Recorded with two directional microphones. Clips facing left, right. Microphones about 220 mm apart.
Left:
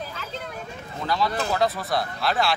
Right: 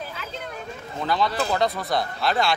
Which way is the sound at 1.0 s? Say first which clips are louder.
Right 1 dB; centre (ahead or behind).